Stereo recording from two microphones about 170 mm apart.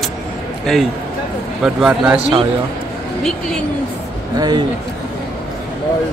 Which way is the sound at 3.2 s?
5° left (ahead or behind).